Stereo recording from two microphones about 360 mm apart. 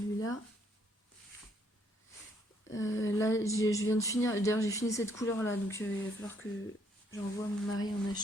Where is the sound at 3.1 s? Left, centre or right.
Centre.